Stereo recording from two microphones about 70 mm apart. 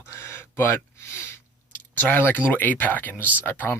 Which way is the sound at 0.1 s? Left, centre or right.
Left.